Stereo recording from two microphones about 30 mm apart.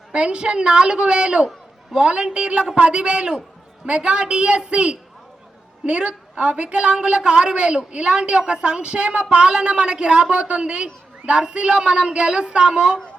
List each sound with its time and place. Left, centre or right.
0.1 s a woman's voice: right